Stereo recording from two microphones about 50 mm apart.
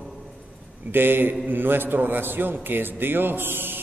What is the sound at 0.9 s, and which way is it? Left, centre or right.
A man's voice, right.